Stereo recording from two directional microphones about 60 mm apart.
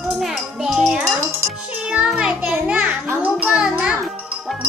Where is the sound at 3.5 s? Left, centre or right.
Centre.